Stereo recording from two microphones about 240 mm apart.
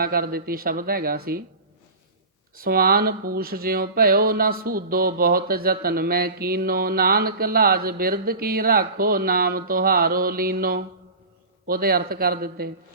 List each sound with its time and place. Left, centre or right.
0.0 s speech: right
2.6 s speech: right